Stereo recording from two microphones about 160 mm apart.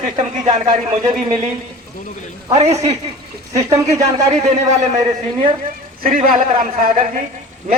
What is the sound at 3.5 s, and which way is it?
Speech, 20° right (ahead or behind).